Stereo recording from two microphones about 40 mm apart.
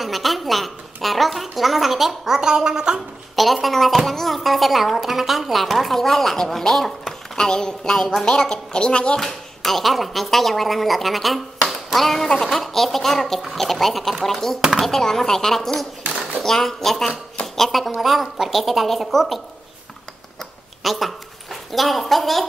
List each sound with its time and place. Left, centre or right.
0.0 s a woman's voice: centre
3.3 s a woman's voice: centre
8.3 s a woman's voice: left
9.2 s a woman's voice: centre
14.6 s speech: centre
14.9 s a woman's voice: centre
20.8 s speech: centre